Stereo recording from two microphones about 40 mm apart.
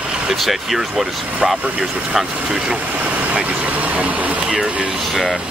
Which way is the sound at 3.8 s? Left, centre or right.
Right.